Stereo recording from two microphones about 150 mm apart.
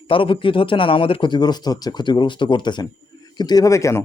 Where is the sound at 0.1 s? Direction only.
35° left (ahead or behind).